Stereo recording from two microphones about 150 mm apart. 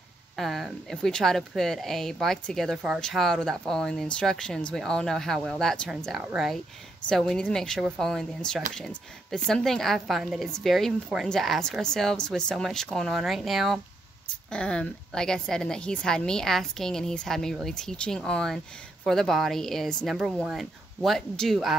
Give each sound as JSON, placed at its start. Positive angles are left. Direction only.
{"t": 0.4, "sound": "speech", "side_deg": 0}